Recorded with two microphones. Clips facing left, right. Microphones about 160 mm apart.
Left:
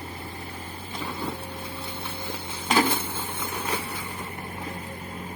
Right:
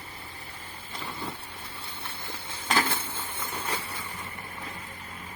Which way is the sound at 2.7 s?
15° left (ahead or behind).